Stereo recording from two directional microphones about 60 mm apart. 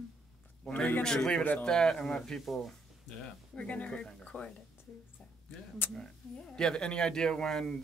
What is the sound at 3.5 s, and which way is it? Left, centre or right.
Speech, left.